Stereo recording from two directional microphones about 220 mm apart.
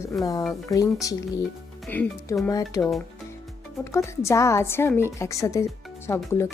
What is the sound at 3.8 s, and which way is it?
A woman's voice, 10° left (ahead or behind).